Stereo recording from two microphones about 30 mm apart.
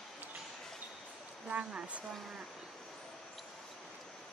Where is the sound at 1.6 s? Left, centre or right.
Right.